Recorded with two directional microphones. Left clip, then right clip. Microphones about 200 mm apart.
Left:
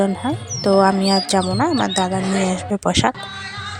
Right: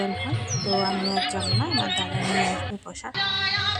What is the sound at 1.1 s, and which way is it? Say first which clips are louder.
Speech: left 7 dB; 45° left (ahead or behind).